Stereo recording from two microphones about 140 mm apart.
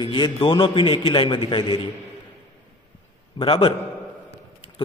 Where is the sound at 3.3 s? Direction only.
40° left (ahead or behind).